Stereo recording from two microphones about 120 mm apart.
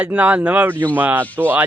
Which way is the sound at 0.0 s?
10° right (ahead or behind).